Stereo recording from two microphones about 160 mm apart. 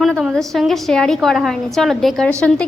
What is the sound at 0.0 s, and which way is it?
A woman's voice, centre (ahead or behind).